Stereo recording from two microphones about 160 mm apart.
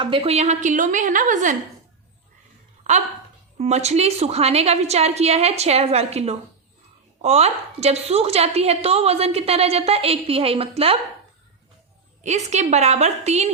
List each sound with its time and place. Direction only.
0.0 s a woman's voice: 35° right (ahead or behind); by 1.5 s 50° right (ahead or behind)
2.8 s a woman's voice: 50° right (ahead or behind)
12.2 s a woman's voice: 45° right (ahead or behind)